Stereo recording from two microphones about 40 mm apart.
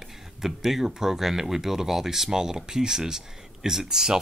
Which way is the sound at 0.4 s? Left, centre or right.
Centre.